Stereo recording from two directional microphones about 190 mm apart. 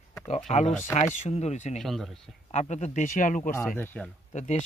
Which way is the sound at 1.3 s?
35° left (ahead or behind).